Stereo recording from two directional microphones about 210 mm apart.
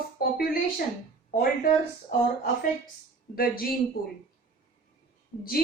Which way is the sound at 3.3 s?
45° left (ahead or behind).